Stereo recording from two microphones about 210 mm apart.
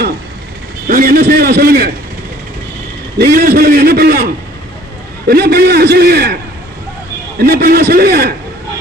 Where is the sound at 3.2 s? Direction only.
45° right (ahead or behind).